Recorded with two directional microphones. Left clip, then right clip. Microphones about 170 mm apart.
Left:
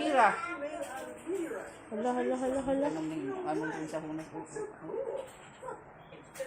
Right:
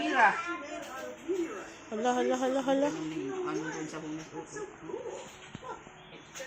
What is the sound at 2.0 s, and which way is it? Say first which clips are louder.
Speech: right 3 dB; 10° right (ahead or behind).